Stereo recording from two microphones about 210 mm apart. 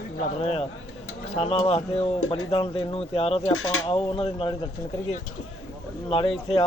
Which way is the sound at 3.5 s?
85° left.